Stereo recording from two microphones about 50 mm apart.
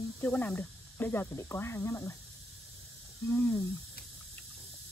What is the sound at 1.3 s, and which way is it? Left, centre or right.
Speech, left.